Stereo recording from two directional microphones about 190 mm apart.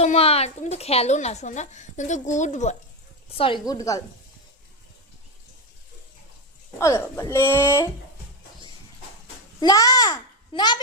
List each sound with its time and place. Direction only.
0.0 s a woman's voice: 35° left (ahead or behind)
3.3 s a woman's voice: 30° left (ahead or behind)
3.7 s speech: 20° left (ahead or behind)
6.7 s speech: 15° left (ahead or behind)
9.6 s a child's voice: 20° left (ahead or behind)